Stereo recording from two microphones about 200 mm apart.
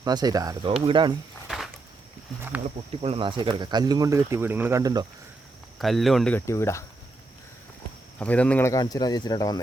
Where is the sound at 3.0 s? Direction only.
30° right (ahead or behind).